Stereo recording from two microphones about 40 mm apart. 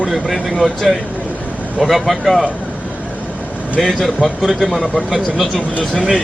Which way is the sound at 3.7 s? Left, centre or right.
Centre.